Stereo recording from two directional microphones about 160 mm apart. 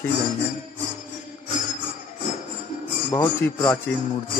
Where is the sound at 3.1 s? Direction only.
15° left (ahead or behind).